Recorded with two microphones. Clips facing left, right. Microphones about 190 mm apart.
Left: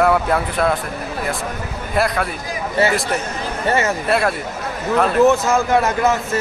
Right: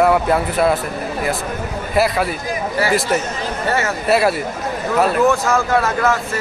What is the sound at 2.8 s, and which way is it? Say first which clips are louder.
Speech: left 2 dB; 25° left (ahead or behind).